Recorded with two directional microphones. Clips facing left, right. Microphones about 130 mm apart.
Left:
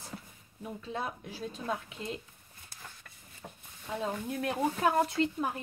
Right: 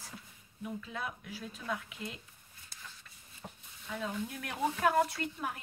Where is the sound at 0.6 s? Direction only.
30° left (ahead or behind).